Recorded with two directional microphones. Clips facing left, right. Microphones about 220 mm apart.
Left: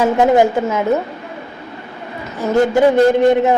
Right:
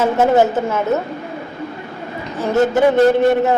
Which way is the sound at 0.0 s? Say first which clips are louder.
Left 1 dB; 15° left (ahead or behind).